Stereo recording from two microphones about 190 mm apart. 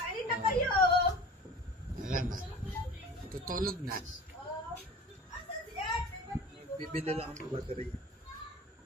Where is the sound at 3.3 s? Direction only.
50° right (ahead or behind).